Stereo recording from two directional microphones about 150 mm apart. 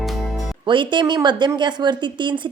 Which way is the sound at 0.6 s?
35° right (ahead or behind).